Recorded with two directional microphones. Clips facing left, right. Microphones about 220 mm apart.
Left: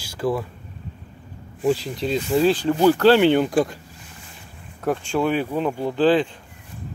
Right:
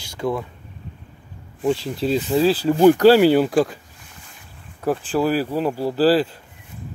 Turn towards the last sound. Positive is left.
turn(degrees=-5)  # may be behind; listen again after turning